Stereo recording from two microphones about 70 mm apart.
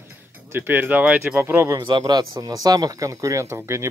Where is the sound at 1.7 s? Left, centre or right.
Right.